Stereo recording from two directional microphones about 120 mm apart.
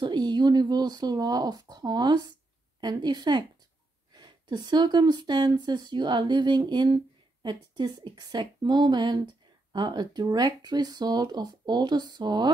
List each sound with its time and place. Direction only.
0.0 s speech: 35° right (ahead or behind)